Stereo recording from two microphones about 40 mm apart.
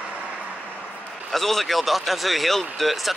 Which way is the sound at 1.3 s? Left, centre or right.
Centre.